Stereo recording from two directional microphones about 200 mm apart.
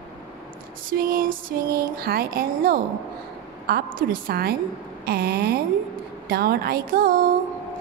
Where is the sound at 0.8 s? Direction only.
45° right (ahead or behind).